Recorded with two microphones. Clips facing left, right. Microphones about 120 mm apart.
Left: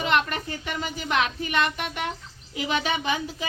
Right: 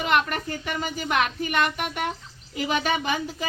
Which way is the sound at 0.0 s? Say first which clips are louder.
Right 1 dB; 5° right (ahead or behind).